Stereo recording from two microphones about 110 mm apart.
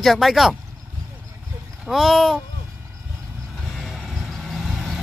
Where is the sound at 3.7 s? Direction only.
Centre (ahead or behind).